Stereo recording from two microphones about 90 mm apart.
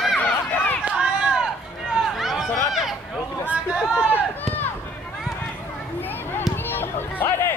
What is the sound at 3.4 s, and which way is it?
Hubbub, 10° right (ahead or behind).